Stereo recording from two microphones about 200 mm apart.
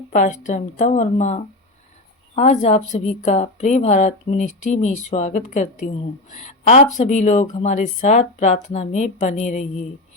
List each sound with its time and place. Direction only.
0.1 s a woman's voice: 35° left (ahead or behind)